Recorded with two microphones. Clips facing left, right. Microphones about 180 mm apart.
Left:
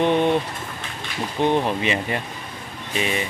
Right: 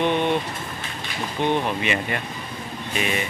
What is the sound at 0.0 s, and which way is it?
Speech, 35° left (ahead or behind).